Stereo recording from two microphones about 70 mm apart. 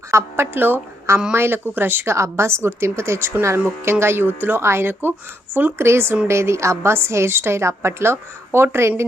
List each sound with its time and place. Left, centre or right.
0.1 s a woman's voice: right
2.1 s a woman's voice: right